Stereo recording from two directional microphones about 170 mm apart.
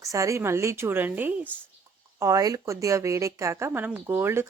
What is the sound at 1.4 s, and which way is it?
Speech, 10° left (ahead or behind).